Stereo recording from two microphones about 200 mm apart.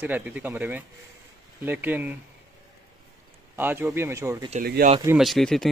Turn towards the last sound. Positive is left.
turn(degrees=0)  # may be behind; listen again after turning